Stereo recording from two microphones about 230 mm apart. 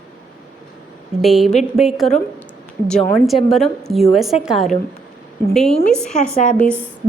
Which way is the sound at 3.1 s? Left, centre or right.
Centre.